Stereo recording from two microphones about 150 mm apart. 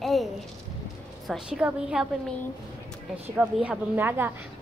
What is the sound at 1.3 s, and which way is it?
Speech, 5° right (ahead or behind).